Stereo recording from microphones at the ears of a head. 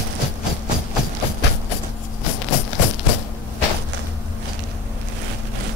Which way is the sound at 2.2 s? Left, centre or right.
Left.